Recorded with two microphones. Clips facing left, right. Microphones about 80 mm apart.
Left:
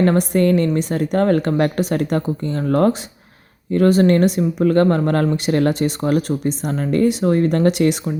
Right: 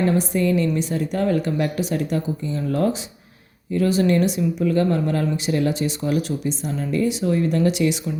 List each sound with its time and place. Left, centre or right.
0.0 s speech: left